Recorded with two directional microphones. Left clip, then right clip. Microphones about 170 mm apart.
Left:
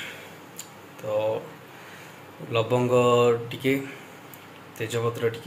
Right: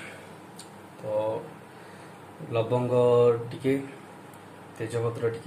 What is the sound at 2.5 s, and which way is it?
Speech, centre (ahead or behind).